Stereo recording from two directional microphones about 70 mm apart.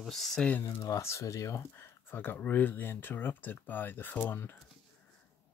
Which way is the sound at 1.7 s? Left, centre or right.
Left.